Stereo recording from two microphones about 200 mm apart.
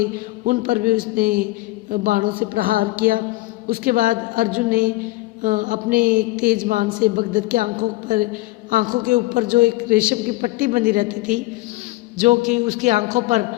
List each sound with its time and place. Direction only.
0.0 s a woman's voice: 45° right (ahead or behind)